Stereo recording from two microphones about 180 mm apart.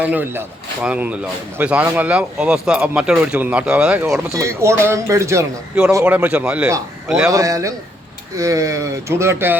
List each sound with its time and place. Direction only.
0.0 s a man's voice: 10° right (ahead or behind)
4.4 s a man's voice: 15° right (ahead or behind)
6.7 s a man's voice: 15° right (ahead or behind)